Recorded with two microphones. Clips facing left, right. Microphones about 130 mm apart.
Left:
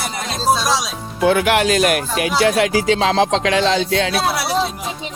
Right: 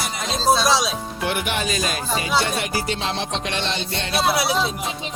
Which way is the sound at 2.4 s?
90° left.